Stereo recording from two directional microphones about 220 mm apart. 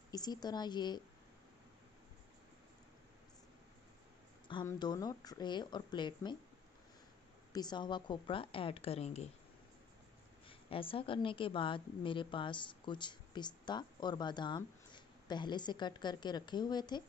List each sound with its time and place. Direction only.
0.1 s a woman's voice: 20° left (ahead or behind)
4.5 s a woman's voice: 20° left (ahead or behind)
7.5 s a woman's voice: 20° left (ahead or behind)
10.7 s a woman's voice: 25° left (ahead or behind)